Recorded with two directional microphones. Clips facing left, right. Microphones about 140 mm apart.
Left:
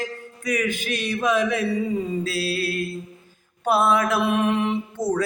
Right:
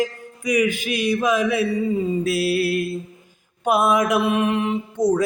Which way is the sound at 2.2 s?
20° right (ahead or behind).